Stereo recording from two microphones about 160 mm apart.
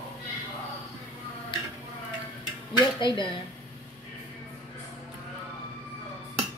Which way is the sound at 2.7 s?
30° left (ahead or behind).